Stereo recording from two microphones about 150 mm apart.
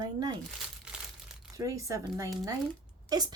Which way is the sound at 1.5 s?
20° right (ahead or behind).